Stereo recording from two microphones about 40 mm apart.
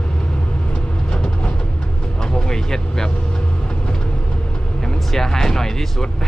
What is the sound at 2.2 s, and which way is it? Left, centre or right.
Vehicle, centre.